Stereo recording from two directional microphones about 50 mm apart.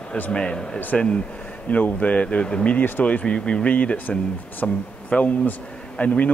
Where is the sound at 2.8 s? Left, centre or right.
Left.